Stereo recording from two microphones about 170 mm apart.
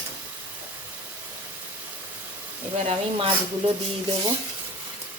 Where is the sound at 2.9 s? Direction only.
30° right (ahead or behind).